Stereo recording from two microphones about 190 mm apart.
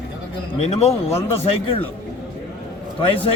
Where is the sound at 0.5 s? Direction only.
35° left (ahead or behind).